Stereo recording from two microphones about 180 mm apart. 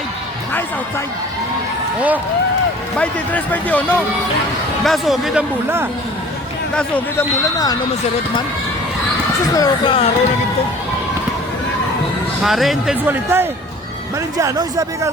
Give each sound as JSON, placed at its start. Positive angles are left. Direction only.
{"t": 2.0, "sound": "speech", "side_deg": -10}
{"t": 3.0, "sound": "speech", "side_deg": 10}
{"t": 6.7, "sound": "speech", "side_deg": 10}
{"t": 9.6, "sound": "speech", "side_deg": 30}
{"t": 12.4, "sound": "speech", "side_deg": 0}